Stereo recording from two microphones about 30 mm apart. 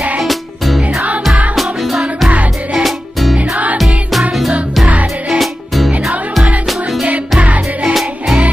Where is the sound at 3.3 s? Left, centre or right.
Right.